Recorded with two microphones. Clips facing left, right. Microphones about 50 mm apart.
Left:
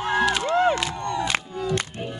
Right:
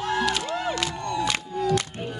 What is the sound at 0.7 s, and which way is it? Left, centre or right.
Crowd, left.